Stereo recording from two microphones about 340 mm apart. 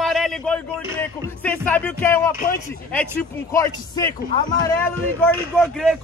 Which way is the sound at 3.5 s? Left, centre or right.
Centre.